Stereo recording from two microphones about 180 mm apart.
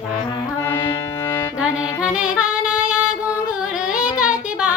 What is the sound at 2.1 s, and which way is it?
Music, 5° right (ahead or behind).